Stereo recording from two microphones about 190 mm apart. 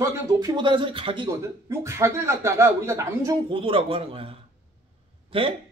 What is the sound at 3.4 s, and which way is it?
Speech, 30° right (ahead or behind).